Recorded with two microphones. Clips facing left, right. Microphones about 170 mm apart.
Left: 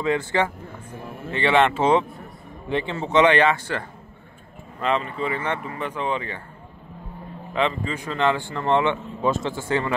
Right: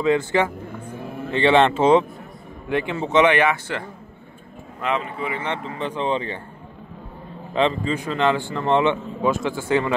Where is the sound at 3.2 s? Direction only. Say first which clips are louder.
Even; 15° right (ahead or behind).